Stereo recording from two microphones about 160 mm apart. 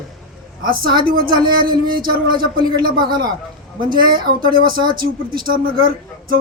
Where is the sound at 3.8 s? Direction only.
65° right (ahead or behind).